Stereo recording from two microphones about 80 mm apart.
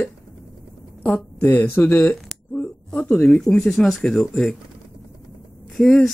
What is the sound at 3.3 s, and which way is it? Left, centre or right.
Speech, centre.